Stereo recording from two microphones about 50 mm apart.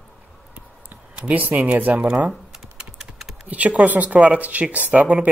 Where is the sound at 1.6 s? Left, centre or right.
Right.